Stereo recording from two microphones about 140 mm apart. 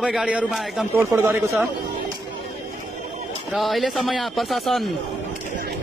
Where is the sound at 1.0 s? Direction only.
20° right (ahead or behind).